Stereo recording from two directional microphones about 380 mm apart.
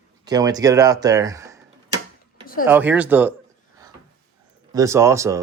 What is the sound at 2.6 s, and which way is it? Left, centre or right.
Speech, centre.